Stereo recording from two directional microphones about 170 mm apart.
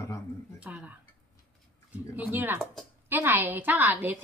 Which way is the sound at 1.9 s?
10° right (ahead or behind).